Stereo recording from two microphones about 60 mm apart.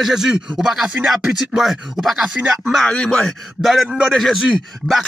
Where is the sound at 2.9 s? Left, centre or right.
Centre.